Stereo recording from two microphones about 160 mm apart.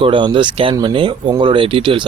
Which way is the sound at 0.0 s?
30° right (ahead or behind).